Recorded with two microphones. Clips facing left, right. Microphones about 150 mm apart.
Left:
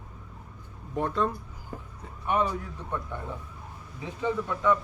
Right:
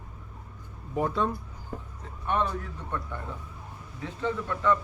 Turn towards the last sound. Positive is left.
turn(degrees=10)  # may be behind; listen again after turning